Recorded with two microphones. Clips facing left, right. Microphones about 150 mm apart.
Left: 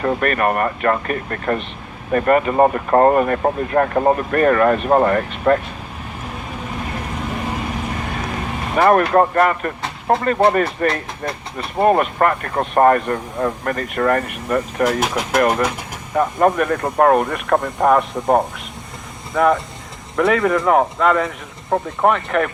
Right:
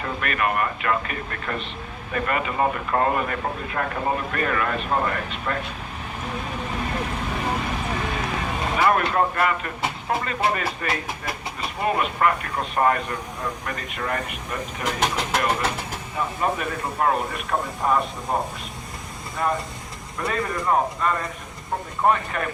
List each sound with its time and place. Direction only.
0.0 s speech: 50° left (ahead or behind)
8.7 s speech: 50° left (ahead or behind)
15.0 s speech: 10° left (ahead or behind)
15.4 s speech: 55° left (ahead or behind)
17.8 s speech: 90° left
19.3 s speech: 70° left (ahead or behind)
20.1 s speech: 90° left
22.0 s speech: 70° left (ahead or behind)